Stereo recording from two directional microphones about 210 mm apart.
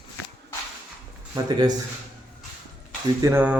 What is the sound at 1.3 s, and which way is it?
Speech, 20° right (ahead or behind).